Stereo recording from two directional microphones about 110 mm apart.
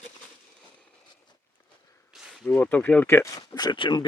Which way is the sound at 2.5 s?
15° left (ahead or behind).